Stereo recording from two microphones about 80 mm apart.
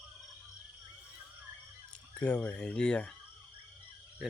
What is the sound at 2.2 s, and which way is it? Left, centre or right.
Speech, centre.